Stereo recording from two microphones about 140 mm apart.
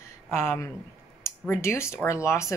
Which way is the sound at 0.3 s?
15° left (ahead or behind).